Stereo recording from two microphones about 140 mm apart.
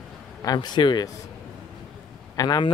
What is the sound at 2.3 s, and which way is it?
Speech, 25° left (ahead or behind).